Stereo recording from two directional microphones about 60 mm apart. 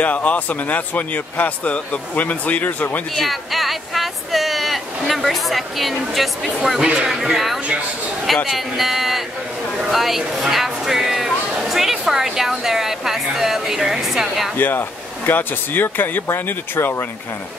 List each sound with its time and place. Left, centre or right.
0.0 s a man's voice: left
3.2 s speech: centre
6.8 s a man's voice: centre
9.8 s a sound: centre
14.6 s speech: left